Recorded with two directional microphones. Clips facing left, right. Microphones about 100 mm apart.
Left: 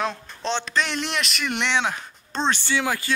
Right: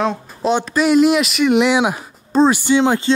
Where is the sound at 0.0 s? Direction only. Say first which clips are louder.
Right 8 dB; 5° right (ahead or behind).